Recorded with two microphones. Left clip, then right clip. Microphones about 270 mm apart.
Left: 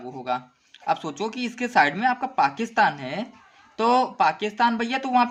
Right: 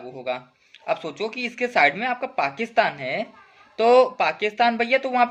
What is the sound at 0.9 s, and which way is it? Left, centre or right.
A man's voice, centre.